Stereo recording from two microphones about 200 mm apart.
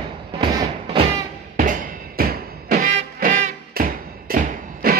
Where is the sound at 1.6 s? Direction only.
45° right (ahead or behind).